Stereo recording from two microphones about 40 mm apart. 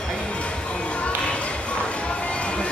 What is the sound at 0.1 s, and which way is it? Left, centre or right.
Music, left.